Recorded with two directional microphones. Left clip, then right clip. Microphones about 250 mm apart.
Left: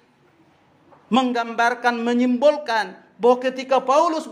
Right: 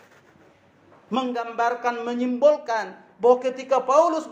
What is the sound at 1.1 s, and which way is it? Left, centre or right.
A man's voice, left.